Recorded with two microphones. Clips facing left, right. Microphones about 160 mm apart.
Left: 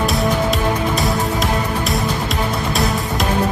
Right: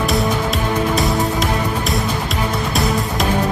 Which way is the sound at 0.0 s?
Centre (ahead or behind).